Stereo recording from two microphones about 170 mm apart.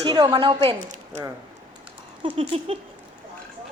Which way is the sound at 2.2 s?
35° right (ahead or behind).